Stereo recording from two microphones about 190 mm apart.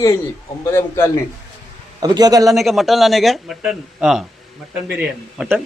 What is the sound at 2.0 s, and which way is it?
Speech, 20° right (ahead or behind).